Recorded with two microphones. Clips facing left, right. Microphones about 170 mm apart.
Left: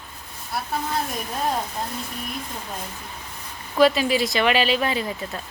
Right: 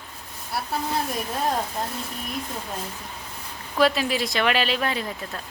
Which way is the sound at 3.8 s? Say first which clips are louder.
Left 3 dB; centre (ahead or behind).